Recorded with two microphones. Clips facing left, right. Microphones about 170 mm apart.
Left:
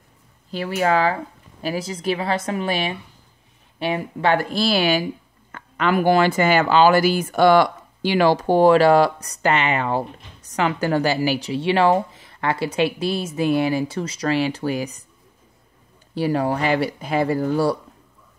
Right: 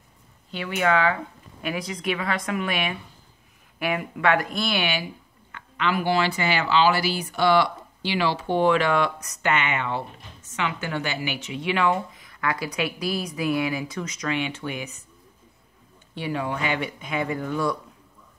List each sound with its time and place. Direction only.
0.5 s a woman's voice: 35° left (ahead or behind)
16.2 s a woman's voice: 40° left (ahead or behind)